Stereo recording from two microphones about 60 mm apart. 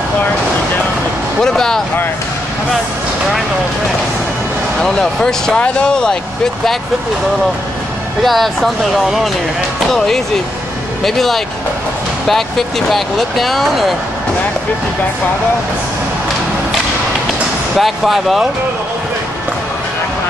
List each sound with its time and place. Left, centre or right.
1.4 s speech: centre
4.7 s speech: centre
8.2 s speech: centre
17.7 s speech: centre